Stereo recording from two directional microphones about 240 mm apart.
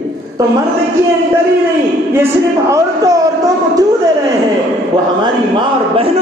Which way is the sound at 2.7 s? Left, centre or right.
Centre.